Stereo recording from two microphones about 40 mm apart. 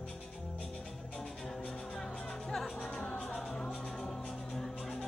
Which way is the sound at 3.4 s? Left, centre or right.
Centre.